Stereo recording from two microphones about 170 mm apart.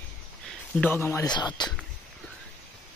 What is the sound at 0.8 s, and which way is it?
Speech, 15° left (ahead or behind).